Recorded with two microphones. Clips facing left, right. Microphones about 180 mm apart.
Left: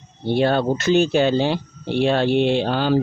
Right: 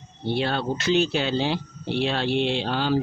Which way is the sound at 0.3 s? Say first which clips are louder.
Left 7 dB; 50° left (ahead or behind).